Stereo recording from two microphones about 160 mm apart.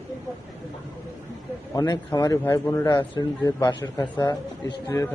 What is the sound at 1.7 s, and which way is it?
Speech, 20° left (ahead or behind).